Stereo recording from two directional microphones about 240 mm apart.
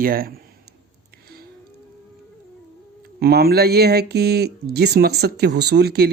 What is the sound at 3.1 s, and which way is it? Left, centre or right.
Speech, right.